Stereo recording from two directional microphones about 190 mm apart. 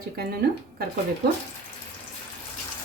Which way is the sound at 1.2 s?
60° right (ahead or behind).